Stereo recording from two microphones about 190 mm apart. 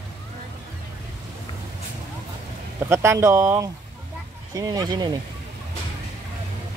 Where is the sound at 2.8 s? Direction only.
15° right (ahead or behind).